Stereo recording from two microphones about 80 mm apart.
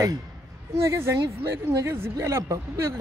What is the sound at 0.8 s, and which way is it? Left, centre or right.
Speech, right.